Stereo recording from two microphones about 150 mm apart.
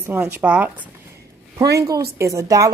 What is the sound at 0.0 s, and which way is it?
Speech, 15° right (ahead or behind).